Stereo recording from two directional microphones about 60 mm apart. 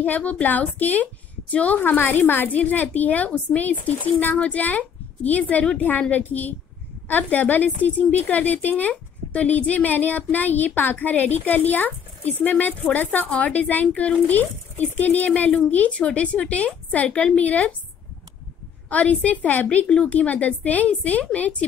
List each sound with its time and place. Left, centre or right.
0.0 s a woman's voice: left
18.9 s a woman's voice: left